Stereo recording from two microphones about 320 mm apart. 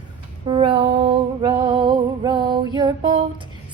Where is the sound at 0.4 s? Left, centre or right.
Centre.